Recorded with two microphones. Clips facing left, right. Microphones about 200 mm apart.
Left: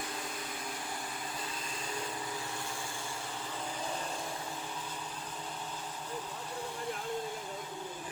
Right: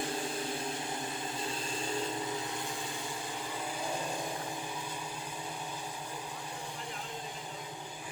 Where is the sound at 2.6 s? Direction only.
15° right (ahead or behind).